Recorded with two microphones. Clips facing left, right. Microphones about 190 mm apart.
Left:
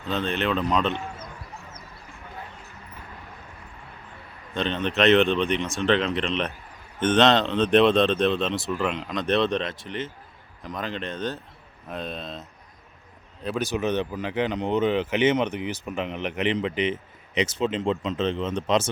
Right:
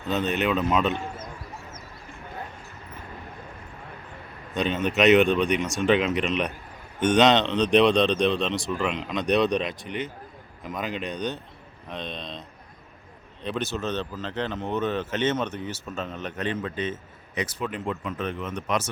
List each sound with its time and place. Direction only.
0.1 s speech: 5° right (ahead or behind)
4.6 s speech: 5° right (ahead or behind)
9.5 s speech: 15° right (ahead or behind)
10.6 s speech: 5° right (ahead or behind); by 18.9 s 25° left (ahead or behind)